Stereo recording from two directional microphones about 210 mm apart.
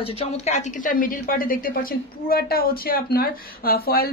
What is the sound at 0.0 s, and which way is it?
A woman's voice, 30° left (ahead or behind).